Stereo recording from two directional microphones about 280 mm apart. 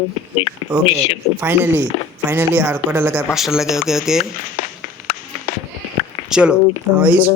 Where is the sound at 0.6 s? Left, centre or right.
Centre.